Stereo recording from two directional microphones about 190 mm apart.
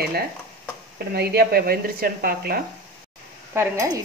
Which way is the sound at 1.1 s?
55° right (ahead or behind).